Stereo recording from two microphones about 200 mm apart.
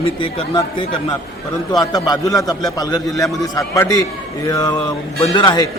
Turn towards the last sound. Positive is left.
turn(degrees=20)  # may be behind; listen again after turning